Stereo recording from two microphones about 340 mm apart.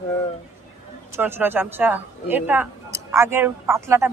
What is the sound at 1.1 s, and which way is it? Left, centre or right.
Speech, centre.